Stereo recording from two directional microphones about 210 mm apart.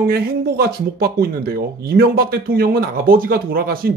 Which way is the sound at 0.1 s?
45° right (ahead or behind).